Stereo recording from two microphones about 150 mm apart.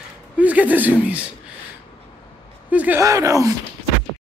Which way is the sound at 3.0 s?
20° right (ahead or behind).